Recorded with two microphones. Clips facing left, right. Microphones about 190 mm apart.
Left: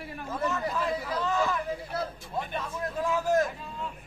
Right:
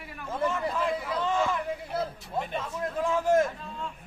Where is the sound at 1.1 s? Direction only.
25° right (ahead or behind).